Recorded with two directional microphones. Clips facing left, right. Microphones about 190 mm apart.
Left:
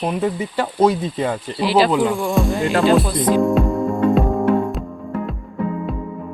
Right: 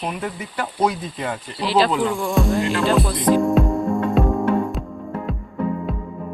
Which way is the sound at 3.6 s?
Centre (ahead or behind).